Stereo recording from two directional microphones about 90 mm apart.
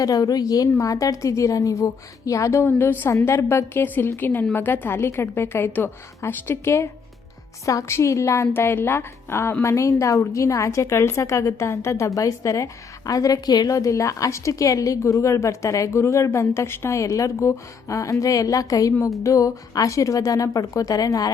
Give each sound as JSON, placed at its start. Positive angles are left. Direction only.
{"t": 0.0, "sound": "a woman's voice", "side_deg": 40}
{"t": 2.6, "sound": "a woman's voice", "side_deg": 25}